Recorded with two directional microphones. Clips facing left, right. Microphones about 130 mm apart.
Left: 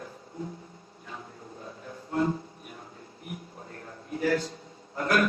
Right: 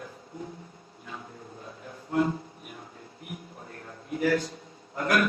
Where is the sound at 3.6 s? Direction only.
30° left (ahead or behind).